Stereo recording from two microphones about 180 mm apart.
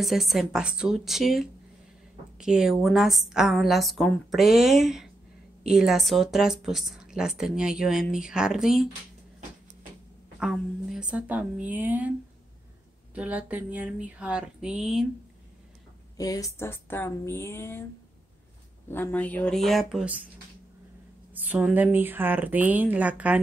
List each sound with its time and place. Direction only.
0.0 s speech: centre (ahead or behind)
10.4 s speech: 5° right (ahead or behind)
13.1 s speech: 5° right (ahead or behind)
16.2 s a woman's voice: 20° left (ahead or behind)
18.9 s speech: 10° left (ahead or behind)
21.5 s speech: 10° right (ahead or behind)